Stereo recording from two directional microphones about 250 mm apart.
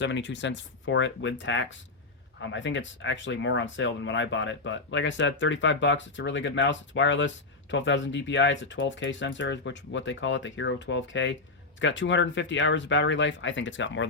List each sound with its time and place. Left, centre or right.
0.0 s speech: left